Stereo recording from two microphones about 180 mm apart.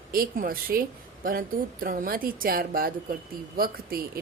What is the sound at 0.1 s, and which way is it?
A woman's voice, 55° right (ahead or behind).